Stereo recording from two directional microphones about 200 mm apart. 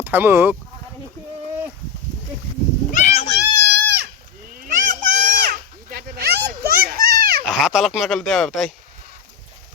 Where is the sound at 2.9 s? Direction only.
35° left (ahead or behind).